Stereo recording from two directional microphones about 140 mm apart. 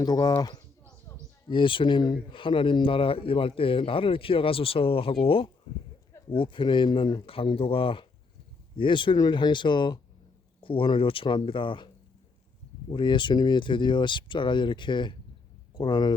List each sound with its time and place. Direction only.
0.0 s speech: 30° left (ahead or behind)
12.9 s speech: 35° left (ahead or behind)